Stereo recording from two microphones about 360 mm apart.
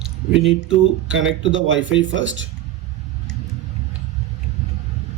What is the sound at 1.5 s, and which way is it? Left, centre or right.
Speech, right.